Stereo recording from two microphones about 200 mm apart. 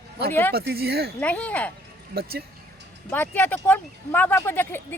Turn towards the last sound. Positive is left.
turn(degrees=10)  # may be behind; listen again after turning